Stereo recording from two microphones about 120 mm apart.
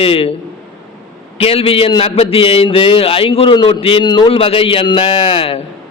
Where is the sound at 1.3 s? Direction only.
50° left (ahead or behind).